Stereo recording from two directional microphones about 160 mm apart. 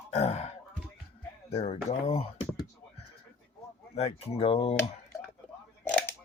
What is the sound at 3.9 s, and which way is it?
Speech, 40° left (ahead or behind).